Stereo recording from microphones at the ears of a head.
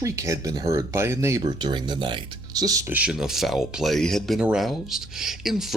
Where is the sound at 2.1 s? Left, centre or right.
Right.